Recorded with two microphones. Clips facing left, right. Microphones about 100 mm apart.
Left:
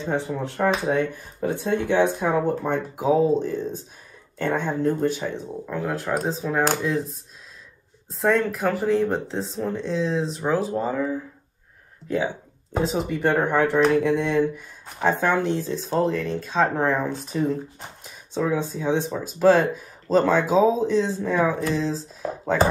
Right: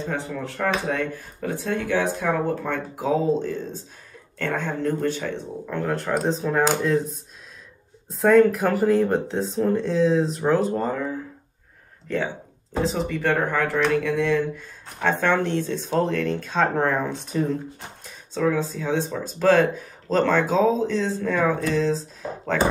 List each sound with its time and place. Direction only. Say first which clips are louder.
0.0 s speech: left 3 dB; 20° left (ahead or behind); by 7.2 s centre (ahead or behind)
8.2 s speech: right 5 dB; centre (ahead or behind)
12.8 s speech: left 1 dB; 20° left (ahead or behind); by 17.6 s centre (ahead or behind)
18.0 s speech: right 2 dB; 15° left (ahead or behind)